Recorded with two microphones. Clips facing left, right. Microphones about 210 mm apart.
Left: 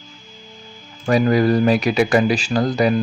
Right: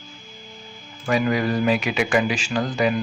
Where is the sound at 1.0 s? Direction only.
40° left (ahead or behind).